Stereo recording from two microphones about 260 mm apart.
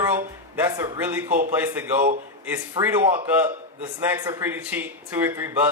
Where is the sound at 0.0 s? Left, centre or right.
Centre.